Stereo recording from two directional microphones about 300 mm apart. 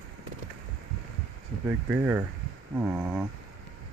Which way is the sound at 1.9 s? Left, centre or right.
Centre.